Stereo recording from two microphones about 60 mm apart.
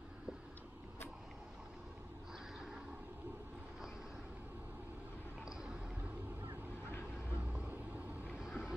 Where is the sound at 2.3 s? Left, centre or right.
Centre.